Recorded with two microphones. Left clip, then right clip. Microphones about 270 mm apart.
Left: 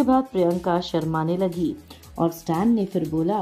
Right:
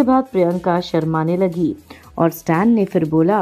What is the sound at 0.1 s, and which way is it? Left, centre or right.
Speech, right.